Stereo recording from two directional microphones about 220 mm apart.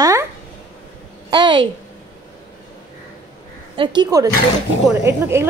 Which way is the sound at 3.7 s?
20° right (ahead or behind).